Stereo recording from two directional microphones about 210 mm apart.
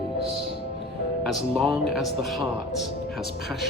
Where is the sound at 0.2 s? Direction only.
25° right (ahead or behind).